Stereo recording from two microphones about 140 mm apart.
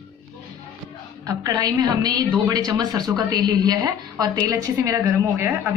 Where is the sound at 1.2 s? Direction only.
25° right (ahead or behind).